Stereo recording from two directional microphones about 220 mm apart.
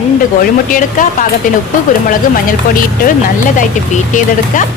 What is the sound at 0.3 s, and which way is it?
A woman's voice, 40° left (ahead or behind).